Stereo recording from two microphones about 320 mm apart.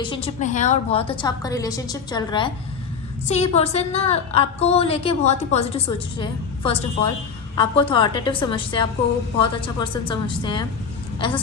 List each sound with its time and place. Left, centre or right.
0.0 s a woman's voice: centre